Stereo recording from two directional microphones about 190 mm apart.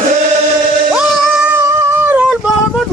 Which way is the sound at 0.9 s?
5° right (ahead or behind).